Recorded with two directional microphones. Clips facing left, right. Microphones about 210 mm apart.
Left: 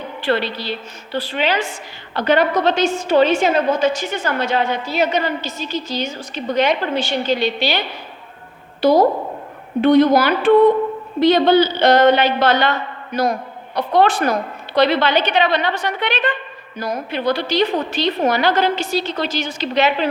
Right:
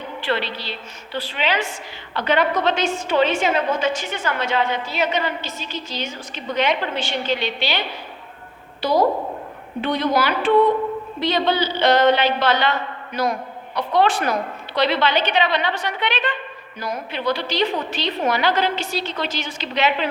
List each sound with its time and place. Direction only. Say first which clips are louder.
1.1 s a woman's voice: left 4 dB; 40° left (ahead or behind)
8.8 s a woman's voice: left 5 dB; 45° left (ahead or behind)
13.7 s a woman's voice: left 3 dB; 45° left (ahead or behind)